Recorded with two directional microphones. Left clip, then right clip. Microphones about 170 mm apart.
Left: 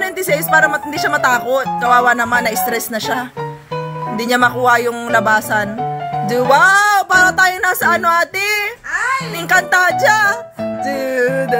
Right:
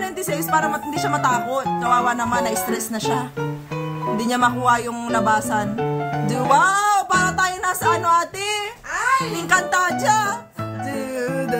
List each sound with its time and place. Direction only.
0.0 s speech: 25° left (ahead or behind)
4.2 s speech: 25° left (ahead or behind)
6.2 s music: 25° left (ahead or behind)
9.5 s speech: 25° left (ahead or behind)
10.9 s music: 25° left (ahead or behind)